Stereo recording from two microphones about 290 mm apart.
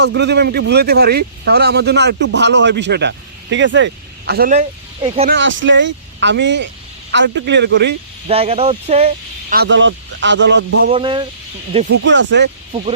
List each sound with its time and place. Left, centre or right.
0.0 s a man's voice: right
5.0 s speech: centre
5.3 s a man's voice: right
8.3 s speech: centre
9.6 s a man's voice: right
10.9 s speech: centre
11.9 s a man's voice: right